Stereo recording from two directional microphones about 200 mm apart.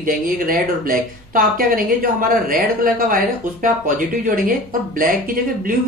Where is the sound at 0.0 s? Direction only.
45° right (ahead or behind).